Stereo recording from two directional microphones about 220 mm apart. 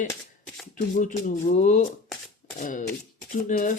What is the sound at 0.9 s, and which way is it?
Speech, 35° left (ahead or behind).